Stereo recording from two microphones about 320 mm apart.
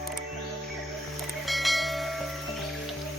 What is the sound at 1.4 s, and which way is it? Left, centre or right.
Bell, centre.